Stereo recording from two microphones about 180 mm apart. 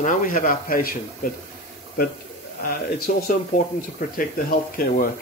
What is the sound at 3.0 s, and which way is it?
Speech, 50° left (ahead or behind).